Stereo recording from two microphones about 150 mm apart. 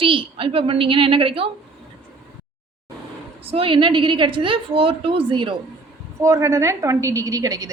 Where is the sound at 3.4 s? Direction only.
40° right (ahead or behind).